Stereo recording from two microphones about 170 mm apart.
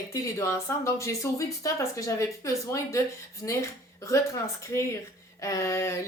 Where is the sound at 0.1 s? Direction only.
20° left (ahead or behind).